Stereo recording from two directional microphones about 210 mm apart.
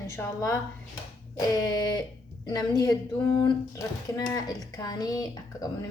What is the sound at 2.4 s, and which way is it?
Speech, 20° left (ahead or behind).